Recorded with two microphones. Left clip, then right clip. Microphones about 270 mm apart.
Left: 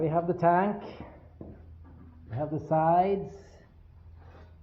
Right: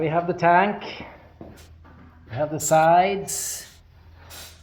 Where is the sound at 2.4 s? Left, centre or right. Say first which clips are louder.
Right 8 dB; centre.